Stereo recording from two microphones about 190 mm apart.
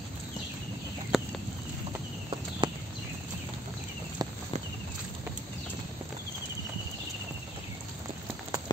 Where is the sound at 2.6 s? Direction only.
25° right (ahead or behind).